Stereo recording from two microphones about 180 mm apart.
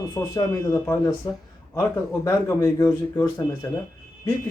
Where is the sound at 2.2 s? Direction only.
15° left (ahead or behind).